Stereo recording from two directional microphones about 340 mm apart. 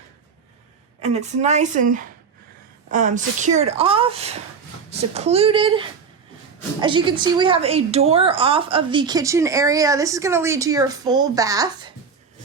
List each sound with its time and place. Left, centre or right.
1.0 s a woman's voice: centre